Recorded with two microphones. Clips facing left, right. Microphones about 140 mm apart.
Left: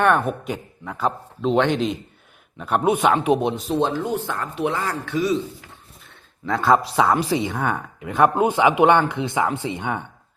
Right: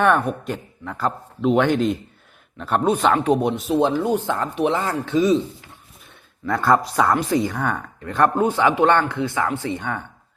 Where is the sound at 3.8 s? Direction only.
15° right (ahead or behind).